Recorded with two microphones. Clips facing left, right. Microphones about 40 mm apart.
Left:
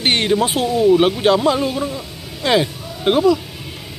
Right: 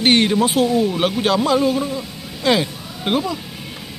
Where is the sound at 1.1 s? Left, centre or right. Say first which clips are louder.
Left 2 dB; centre.